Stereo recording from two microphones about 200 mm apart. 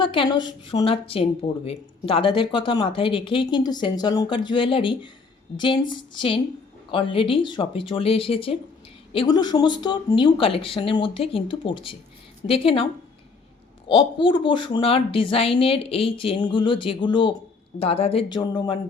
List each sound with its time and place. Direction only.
0.0 s a woman's voice: 25° left (ahead or behind)